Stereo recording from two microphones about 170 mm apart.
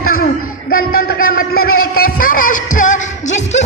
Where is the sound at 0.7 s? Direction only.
60° left (ahead or behind).